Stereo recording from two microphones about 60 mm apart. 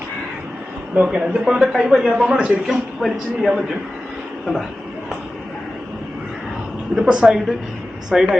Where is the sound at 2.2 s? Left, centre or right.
Centre.